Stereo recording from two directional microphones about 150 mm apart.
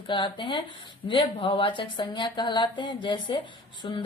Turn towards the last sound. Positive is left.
turn(degrees=30)  # may be behind; listen again after turning